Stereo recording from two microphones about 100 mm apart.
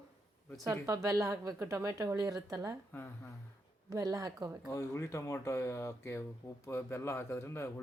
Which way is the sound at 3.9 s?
35° right (ahead or behind).